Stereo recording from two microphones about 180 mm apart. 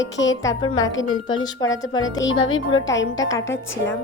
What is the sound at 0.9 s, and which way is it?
Speech, 90° left.